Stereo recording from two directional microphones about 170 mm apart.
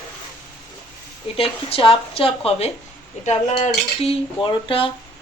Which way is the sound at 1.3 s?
35° left (ahead or behind).